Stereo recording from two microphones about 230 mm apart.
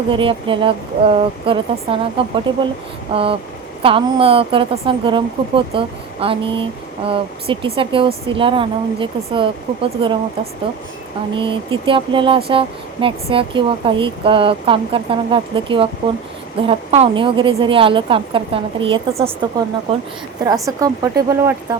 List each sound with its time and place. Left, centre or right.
0.1 s speech: right